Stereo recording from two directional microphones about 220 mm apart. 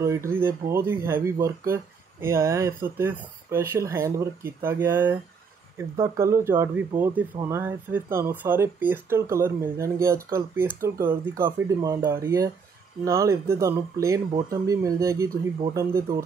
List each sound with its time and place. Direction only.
0.0 s speech: 15° right (ahead or behind)